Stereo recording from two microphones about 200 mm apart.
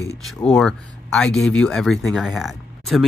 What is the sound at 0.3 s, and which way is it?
Speech, centre (ahead or behind).